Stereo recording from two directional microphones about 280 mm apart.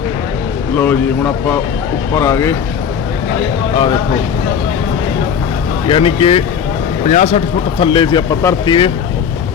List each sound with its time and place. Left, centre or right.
0.8 s speech: centre
5.9 s speech: centre